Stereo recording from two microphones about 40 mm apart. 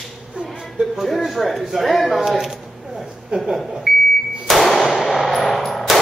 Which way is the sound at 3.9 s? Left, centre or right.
Centre.